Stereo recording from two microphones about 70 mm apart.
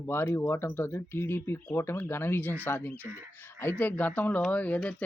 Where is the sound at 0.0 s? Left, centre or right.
Left.